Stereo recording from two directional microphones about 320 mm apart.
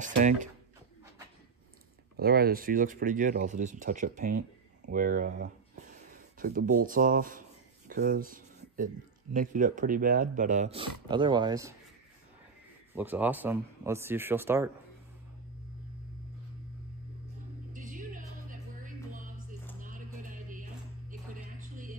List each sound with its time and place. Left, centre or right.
0.0 s speech: right
2.1 s speech: right
6.1 s a sound: right
6.8 s speech: right
12.9 s speech: centre
17.7 s music: right